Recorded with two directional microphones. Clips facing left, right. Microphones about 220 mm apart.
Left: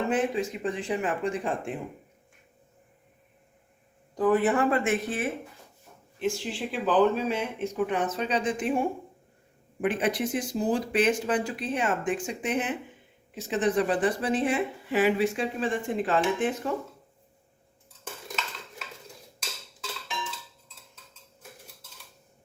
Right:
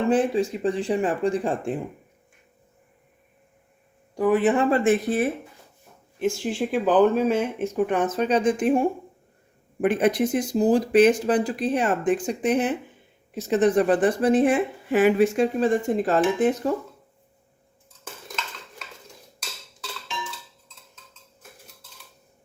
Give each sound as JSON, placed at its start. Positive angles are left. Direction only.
{"t": 0.1, "sound": "speech", "side_deg": -35}
{"t": 4.1, "sound": "speech", "side_deg": -15}
{"t": 4.7, "sound": "speech", "side_deg": -35}
{"t": 6.1, "sound": "speech", "side_deg": -50}
{"t": 9.8, "sound": "speech", "side_deg": -45}